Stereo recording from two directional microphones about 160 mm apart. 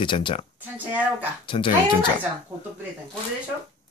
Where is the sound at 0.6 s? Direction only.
10° right (ahead or behind).